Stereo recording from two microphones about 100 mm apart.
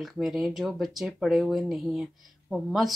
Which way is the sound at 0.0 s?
Centre (ahead or behind).